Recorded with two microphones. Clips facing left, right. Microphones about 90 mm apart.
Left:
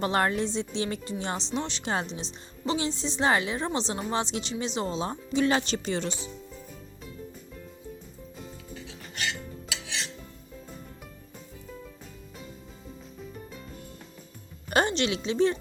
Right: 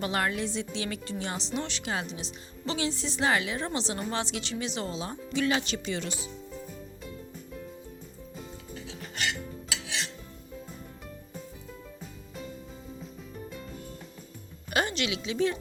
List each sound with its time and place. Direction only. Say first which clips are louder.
0.0 s a woman's voice: left 4 dB; 35° left (ahead or behind)
1.8 s speech: left 3 dB; 35° left (ahead or behind)
2.6 s a woman's voice: left 2 dB; 20° left (ahead or behind)
5.5 s speech: left 3 dB; 35° left (ahead or behind)
8.4 s music: even; centre (ahead or behind)
14.7 s a woman's voice: left 4 dB; 35° left (ahead or behind)